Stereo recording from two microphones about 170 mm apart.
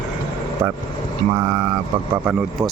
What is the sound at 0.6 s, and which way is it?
Speech, 15° right (ahead or behind).